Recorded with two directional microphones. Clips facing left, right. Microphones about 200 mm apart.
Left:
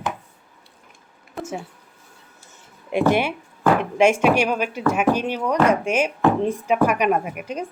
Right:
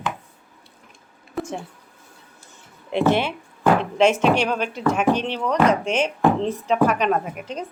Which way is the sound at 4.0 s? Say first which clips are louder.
Left 1 dB; 10° left (ahead or behind).